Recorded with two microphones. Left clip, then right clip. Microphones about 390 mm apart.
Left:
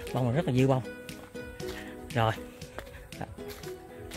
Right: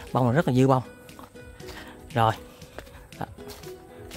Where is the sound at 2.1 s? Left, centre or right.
Centre.